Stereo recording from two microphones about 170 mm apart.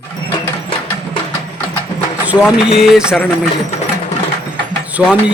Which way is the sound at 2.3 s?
15° left (ahead or behind).